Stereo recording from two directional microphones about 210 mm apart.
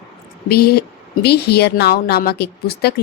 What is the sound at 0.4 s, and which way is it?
A woman's voice, 50° left (ahead or behind).